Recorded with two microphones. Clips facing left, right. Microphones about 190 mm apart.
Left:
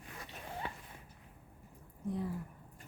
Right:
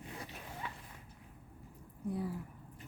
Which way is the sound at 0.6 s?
35° left (ahead or behind).